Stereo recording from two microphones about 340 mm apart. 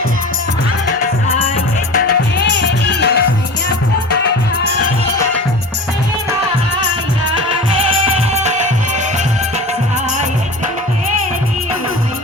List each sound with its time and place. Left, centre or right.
2.4 s music: left
8.3 s music: centre